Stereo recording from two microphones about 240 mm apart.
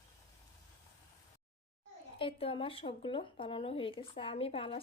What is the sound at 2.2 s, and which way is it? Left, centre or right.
Speech, left.